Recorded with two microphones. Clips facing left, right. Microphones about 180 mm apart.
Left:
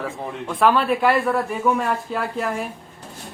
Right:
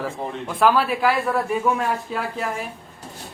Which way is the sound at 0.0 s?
Centre (ahead or behind).